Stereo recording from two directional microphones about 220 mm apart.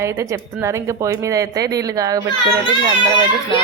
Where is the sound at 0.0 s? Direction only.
15° right (ahead or behind).